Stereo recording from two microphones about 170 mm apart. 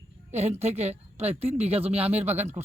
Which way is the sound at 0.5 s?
40° right (ahead or behind).